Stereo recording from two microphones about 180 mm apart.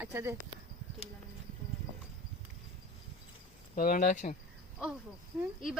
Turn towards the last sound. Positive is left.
turn(degrees=-10)  # may be behind; listen again after turning